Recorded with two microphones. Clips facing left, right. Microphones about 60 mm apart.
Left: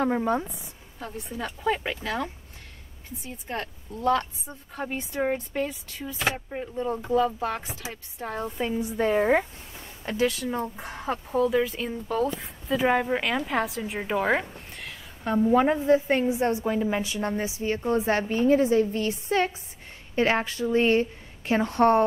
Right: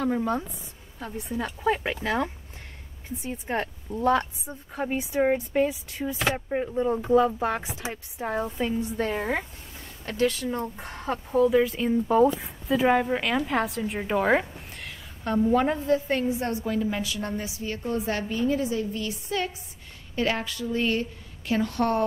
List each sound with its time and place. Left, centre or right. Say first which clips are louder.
0.0 s a woman's voice: left 2 dB; left
0.9 s a woman's voice: right 3 dB; centre
3.3 s a woman's voice: right 4 dB; right
8.2 s a woman's voice: right 3 dB; centre
8.5 s a woman's voice: even; centre
12.1 s speech: right 6 dB; centre
12.4 s a woman's voice: right 1 dB; centre
15.8 s a woman's voice: left 3 dB; left